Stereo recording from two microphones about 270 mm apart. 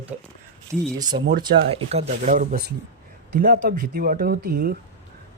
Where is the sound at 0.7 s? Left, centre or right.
Centre.